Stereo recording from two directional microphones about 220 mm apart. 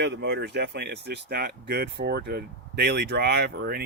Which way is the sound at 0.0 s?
50° right (ahead or behind).